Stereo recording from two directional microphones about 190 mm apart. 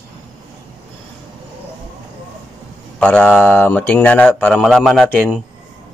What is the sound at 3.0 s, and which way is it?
Speech, 5° left (ahead or behind).